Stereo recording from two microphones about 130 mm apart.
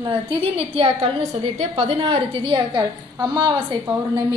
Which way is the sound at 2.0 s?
40° right (ahead or behind).